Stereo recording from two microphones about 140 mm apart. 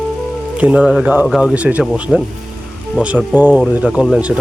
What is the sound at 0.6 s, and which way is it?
A man's voice, 10° right (ahead or behind).